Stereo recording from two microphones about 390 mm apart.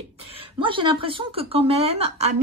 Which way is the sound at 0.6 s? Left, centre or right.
Centre.